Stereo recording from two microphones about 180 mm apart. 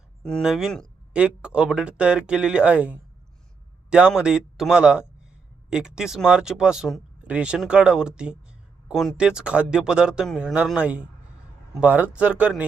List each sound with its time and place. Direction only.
0.2 s speech: 5° left (ahead or behind)